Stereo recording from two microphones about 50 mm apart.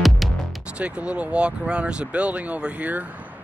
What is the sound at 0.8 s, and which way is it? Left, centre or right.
Speech, right.